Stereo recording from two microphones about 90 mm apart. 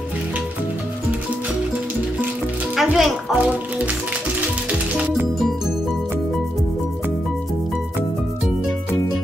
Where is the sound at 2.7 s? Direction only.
5° right (ahead or behind).